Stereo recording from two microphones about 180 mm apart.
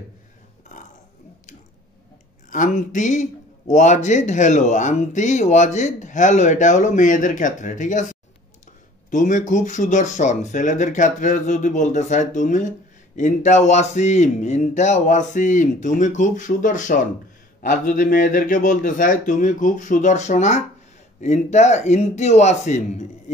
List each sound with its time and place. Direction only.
2.5 s a man's voice: 45° left (ahead or behind)